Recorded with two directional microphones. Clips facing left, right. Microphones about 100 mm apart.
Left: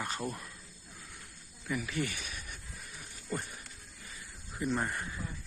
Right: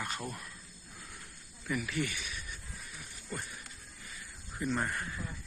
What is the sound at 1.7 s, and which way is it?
Speech, 25° left (ahead or behind).